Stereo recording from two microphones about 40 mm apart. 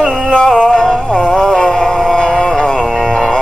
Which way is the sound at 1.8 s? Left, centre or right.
Centre.